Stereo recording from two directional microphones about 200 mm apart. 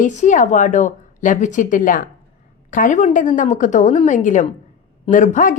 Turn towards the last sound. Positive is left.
turn(degrees=40)  # may be behind; listen again after turning